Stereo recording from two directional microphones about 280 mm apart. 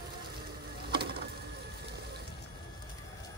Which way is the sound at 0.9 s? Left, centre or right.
Right.